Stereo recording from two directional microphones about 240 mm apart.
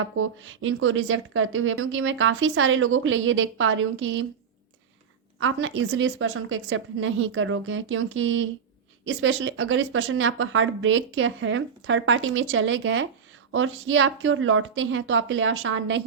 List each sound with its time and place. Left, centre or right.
0.2 s speech: right
5.4 s speech: right